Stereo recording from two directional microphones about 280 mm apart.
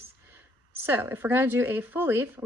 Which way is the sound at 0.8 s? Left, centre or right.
Centre.